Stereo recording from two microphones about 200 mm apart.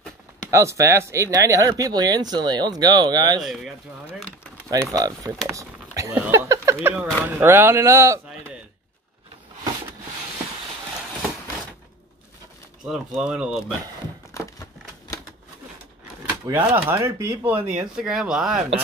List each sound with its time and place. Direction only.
0.5 s speech: 15° right (ahead or behind)
3.4 s speech: 5° right (ahead or behind)
4.9 s speech: 15° right (ahead or behind)
12.8 s speech: centre (ahead or behind)
14.3 s a sound: 15° left (ahead or behind)
16.4 s speech: 10° right (ahead or behind)